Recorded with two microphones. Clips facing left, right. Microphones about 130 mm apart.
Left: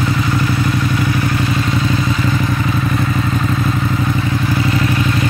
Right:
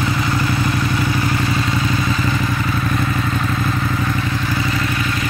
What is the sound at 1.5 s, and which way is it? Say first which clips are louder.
Vehicle: left 2 dB; centre (ahead or behind).